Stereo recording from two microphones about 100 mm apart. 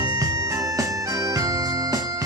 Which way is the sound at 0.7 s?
35° right (ahead or behind).